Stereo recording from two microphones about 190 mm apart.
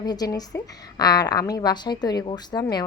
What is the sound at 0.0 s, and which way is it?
A woman's voice, 20° left (ahead or behind).